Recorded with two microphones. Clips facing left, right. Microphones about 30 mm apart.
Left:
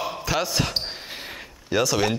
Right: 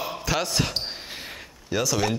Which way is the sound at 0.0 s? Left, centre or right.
Centre.